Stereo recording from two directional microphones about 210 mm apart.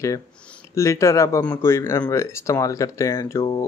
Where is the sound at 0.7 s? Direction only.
15° left (ahead or behind).